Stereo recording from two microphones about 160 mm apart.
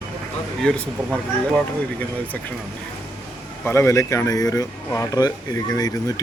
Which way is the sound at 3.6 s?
15° left (ahead or behind).